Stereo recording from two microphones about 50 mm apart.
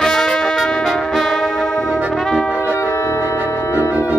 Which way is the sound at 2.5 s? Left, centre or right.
Left.